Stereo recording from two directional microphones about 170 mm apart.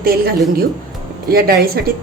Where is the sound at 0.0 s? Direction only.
60° right (ahead or behind).